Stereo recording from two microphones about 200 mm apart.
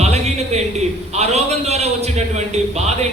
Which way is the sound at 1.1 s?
35° right (ahead or behind).